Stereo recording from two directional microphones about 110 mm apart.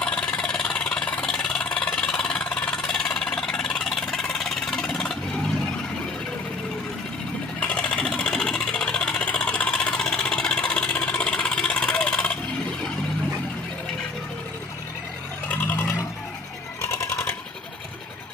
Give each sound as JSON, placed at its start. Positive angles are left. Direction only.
{"t": 0.0, "sound": "vehicle", "side_deg": 10}
{"t": 7.6, "sound": "sewing machine", "side_deg": 10}
{"t": 15.4, "sound": "a sound", "side_deg": 15}
{"t": 17.0, "sound": "sewing machine", "side_deg": 20}